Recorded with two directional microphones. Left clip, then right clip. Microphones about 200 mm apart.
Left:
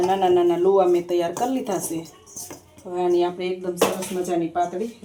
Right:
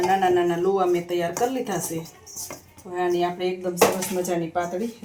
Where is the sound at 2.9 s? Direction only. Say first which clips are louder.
Left 2 dB; 20° left (ahead or behind).